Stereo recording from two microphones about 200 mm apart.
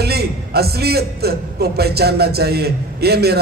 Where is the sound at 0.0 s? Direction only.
50° right (ahead or behind).